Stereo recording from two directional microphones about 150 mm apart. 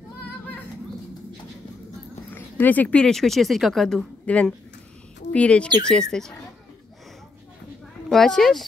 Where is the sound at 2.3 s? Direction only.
10° left (ahead or behind).